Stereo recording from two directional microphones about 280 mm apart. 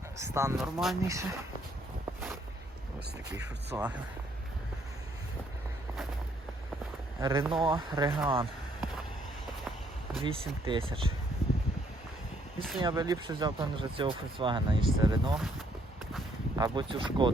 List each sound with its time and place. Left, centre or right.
0.2 s speech: centre
3.7 s speech: centre
7.2 s speech: centre
10.2 s speech: centre
12.8 s speech: centre
16.6 s speech: centre